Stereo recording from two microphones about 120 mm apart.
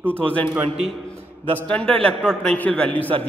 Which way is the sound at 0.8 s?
Centre (ahead or behind).